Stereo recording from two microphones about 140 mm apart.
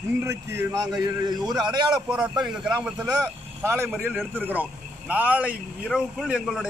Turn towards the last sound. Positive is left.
turn(degrees=-5)  # may be behind; listen again after turning